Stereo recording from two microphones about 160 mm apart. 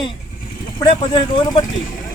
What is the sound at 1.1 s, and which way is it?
Speech, 30° left (ahead or behind).